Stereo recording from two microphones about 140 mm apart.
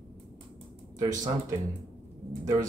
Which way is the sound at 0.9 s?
25° right (ahead or behind).